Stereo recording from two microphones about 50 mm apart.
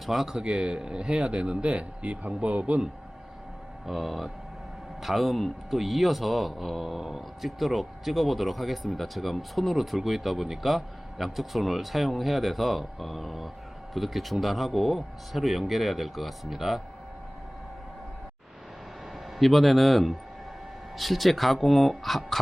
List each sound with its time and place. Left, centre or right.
0.0 s a man's voice: centre
0.3 s speech: centre
3.8 s a man's voice: centre
19.4 s a man's voice: centre